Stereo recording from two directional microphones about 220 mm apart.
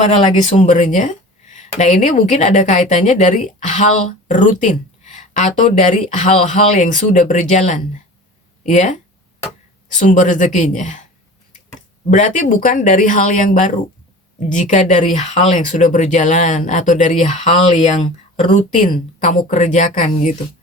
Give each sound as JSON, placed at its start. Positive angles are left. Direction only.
{"t": 0.0, "sound": "speech", "side_deg": 30}
{"t": 10.0, "sound": "speech", "side_deg": 35}
{"t": 12.1, "sound": "speech", "side_deg": 35}